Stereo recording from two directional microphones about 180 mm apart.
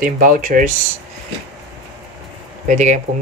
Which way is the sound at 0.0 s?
50° right (ahead or behind).